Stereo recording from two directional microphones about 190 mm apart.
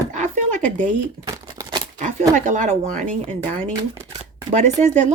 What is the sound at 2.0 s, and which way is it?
Speech, 40° right (ahead or behind).